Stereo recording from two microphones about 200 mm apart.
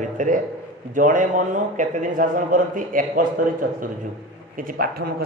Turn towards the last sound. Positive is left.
turn(degrees=-50)  # may be behind; listen again after turning